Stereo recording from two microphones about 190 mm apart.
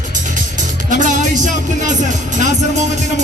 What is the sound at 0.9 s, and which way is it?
Speech, 40° right (ahead or behind).